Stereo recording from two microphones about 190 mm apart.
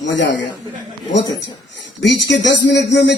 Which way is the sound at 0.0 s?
70° left (ahead or behind).